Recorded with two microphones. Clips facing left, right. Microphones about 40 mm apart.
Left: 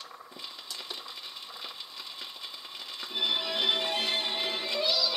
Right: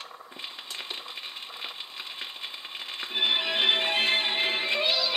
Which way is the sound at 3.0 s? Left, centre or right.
Right.